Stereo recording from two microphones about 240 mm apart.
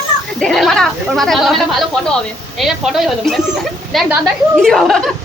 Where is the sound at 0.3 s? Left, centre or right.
Centre.